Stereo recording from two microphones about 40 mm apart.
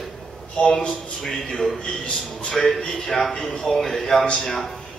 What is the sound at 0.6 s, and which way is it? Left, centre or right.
Speech, left.